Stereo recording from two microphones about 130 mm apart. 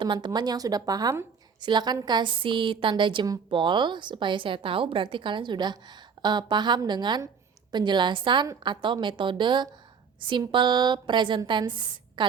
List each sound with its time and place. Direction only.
0.0 s a woman's voice: 35° right (ahead or behind)